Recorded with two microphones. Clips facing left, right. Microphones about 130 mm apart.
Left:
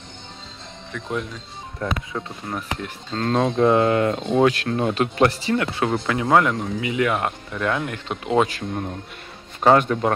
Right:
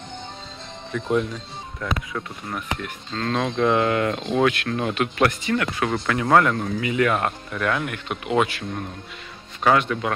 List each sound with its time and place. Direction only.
0.9 s speech: centre (ahead or behind)
1.8 s a man's voice: 30° left (ahead or behind)